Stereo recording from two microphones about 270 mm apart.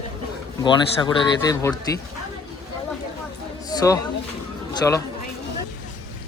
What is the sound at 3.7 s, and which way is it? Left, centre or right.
A man's voice, centre.